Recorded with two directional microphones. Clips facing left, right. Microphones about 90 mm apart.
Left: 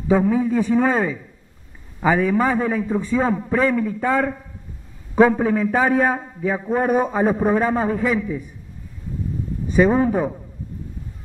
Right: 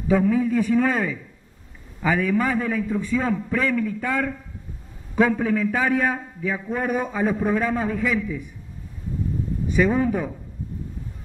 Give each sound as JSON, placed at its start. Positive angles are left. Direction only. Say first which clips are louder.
{"t": 0.1, "sound": "a man's voice", "louder": "left 2 dB", "side_deg": 25}
{"t": 9.7, "sound": "a man's voice", "louder": "left 4 dB", "side_deg": 35}